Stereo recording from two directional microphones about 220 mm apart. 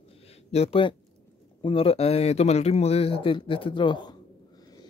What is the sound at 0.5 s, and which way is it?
Speech, 25° left (ahead or behind).